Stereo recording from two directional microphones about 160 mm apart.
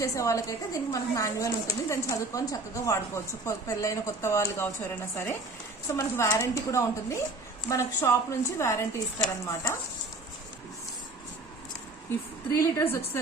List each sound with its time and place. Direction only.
0.0 s a woman's voice: 20° left (ahead or behind)
12.5 s a woman's voice: 15° left (ahead or behind)